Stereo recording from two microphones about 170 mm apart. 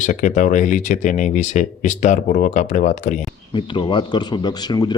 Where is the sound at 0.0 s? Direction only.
45° left (ahead or behind).